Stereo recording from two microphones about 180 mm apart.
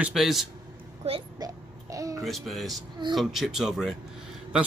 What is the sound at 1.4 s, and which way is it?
Babbling, 20° right (ahead or behind).